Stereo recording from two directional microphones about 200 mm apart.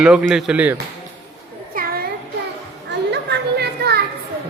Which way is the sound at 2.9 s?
60° right (ahead or behind).